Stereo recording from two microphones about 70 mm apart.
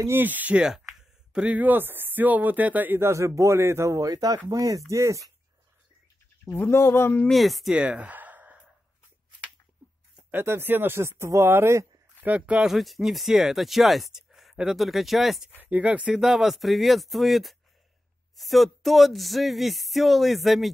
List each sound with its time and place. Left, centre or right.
0.2 s speech: right
3.1 s speech: right
6.5 s speech: left
7.2 s a sound: centre
7.7 s gasp: centre
10.3 s speech: right
12.2 s speech: right
12.7 s a sound: centre
14.1 s speech: centre
15.6 s speech: right
16.1 s a sound: centre